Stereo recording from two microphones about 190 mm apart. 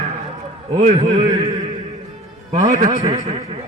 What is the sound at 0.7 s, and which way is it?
Speech, 35° right (ahead or behind).